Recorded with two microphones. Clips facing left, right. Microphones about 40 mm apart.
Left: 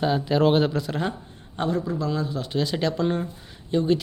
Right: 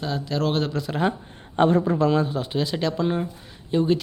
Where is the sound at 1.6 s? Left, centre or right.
Right.